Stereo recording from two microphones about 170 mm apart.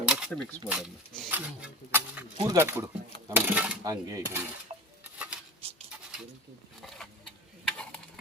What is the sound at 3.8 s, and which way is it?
Cutlery, 20° right (ahead or behind).